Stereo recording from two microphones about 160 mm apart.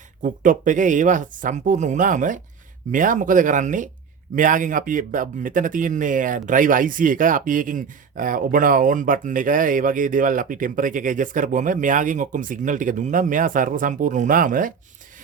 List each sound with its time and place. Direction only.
0.2 s speech: 55° right (ahead or behind)